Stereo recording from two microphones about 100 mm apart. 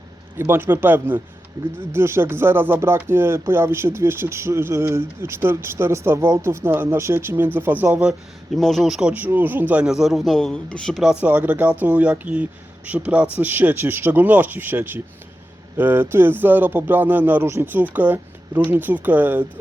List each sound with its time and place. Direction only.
0.3 s speech: 25° right (ahead or behind)
8.5 s a man's voice: 5° left (ahead or behind)
9.1 s speech: 20° right (ahead or behind)
9.8 s a man's voice: 5° right (ahead or behind)
11.1 s speech: 15° right (ahead or behind)